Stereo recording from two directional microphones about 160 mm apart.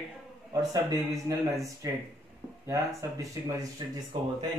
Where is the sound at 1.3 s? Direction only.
20° right (ahead or behind).